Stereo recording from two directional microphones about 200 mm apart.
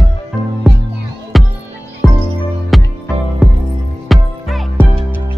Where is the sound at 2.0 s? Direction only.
15° left (ahead or behind).